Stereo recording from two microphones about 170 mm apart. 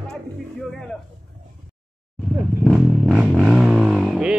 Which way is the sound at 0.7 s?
5° left (ahead or behind).